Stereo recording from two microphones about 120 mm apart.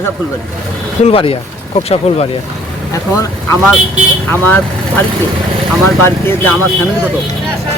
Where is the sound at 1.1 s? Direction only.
50° left (ahead or behind).